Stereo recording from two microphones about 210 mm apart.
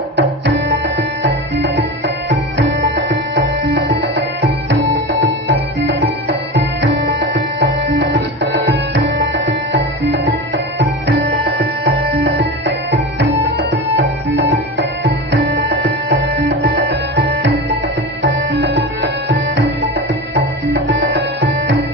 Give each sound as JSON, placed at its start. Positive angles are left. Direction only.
{"t": 0.2, "sound": "music", "side_deg": -55}